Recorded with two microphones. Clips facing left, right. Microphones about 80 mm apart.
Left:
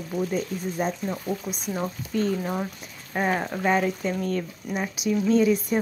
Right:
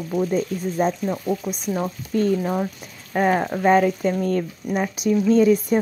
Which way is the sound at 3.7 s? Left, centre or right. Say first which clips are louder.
Right 7 dB; right.